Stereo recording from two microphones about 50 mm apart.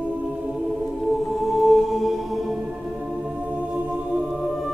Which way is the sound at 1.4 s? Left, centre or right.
Centre.